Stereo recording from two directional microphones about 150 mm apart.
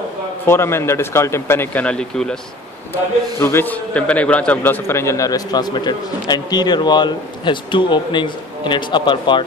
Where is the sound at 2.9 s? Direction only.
15° left (ahead or behind).